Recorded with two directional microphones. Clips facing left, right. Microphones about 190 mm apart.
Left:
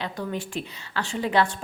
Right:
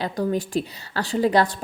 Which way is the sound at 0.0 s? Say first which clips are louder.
Right 7 dB; 40° right (ahead or behind).